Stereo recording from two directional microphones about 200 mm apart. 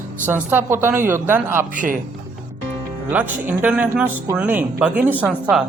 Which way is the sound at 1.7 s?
40° right (ahead or behind).